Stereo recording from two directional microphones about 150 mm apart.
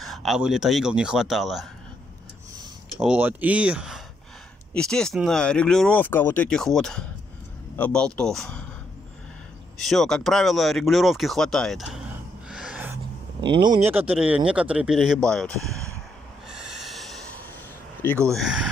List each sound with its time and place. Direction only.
0.0 s speech: centre (ahead or behind)
3.0 s speech: 10° right (ahead or behind)
4.7 s speech: 5° left (ahead or behind)
9.8 s speech: centre (ahead or behind)
12.4 s gasp: 5° right (ahead or behind)
12.9 s a sound: 30° right (ahead or behind)
13.8 s speech: 10° right (ahead or behind)
16.4 s snort: 5° right (ahead or behind)
18.3 s speech: 5° right (ahead or behind)